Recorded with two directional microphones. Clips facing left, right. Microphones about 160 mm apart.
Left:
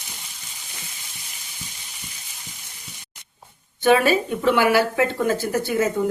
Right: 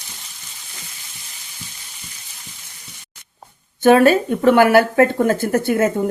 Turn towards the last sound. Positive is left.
turn(degrees=-55)  # may be behind; listen again after turning